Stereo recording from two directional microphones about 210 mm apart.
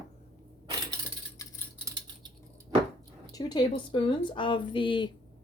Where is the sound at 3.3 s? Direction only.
20° left (ahead or behind).